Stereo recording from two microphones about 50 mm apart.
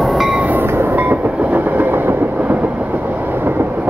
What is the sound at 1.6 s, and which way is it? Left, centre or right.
Train, right.